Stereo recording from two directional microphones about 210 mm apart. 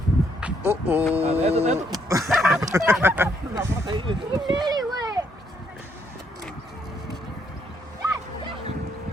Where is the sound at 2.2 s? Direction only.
Centre (ahead or behind).